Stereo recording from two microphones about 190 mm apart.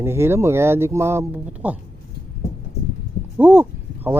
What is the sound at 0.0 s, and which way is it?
Speech, 15° right (ahead or behind).